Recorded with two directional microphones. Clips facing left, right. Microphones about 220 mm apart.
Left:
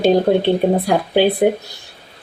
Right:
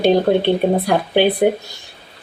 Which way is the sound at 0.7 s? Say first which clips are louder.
Even; centre (ahead or behind).